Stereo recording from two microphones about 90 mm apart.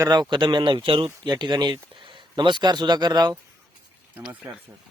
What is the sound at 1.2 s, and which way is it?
Speech, 55° right (ahead or behind).